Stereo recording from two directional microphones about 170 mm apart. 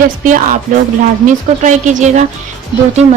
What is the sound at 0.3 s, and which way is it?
Speech, 50° right (ahead or behind).